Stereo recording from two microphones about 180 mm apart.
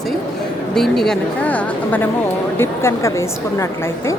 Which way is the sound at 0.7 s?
Centre (ahead or behind).